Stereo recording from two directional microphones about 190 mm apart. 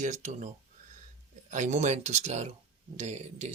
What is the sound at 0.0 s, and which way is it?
Speech, 40° right (ahead or behind).